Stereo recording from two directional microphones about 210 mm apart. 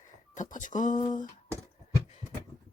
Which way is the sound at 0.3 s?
35° left (ahead or behind).